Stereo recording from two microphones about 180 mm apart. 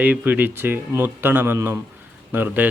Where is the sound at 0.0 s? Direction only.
10° right (ahead or behind).